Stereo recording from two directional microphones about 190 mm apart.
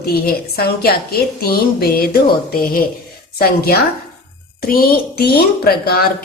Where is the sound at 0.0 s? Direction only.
55° left (ahead or behind).